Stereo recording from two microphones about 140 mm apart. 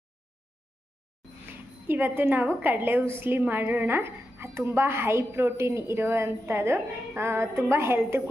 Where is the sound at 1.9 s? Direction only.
15° right (ahead or behind).